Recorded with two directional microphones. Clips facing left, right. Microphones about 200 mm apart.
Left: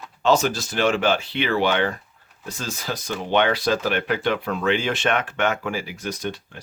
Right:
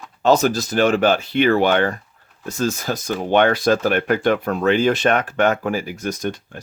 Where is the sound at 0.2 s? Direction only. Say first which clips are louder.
Right 4 dB; 40° right (ahead or behind).